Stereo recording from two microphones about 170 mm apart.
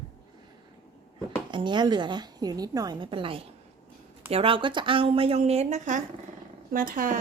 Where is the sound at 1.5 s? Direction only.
25° right (ahead or behind).